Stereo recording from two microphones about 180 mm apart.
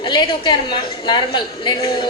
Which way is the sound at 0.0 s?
25° left (ahead or behind).